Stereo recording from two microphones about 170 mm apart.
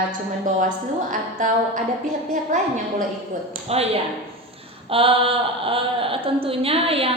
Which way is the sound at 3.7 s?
35° right (ahead or behind).